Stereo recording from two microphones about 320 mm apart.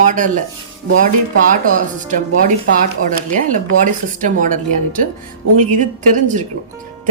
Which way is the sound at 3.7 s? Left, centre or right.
Right.